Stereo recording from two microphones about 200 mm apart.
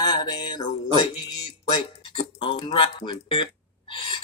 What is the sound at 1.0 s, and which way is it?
Music, 25° left (ahead or behind).